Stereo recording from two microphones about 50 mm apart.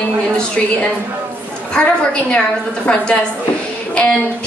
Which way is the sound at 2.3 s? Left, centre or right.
Left.